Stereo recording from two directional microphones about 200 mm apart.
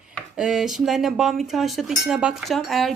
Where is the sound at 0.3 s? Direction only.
5° right (ahead or behind).